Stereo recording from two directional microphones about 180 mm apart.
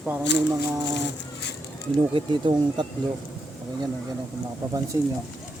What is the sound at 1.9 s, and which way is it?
Speech, 25° right (ahead or behind).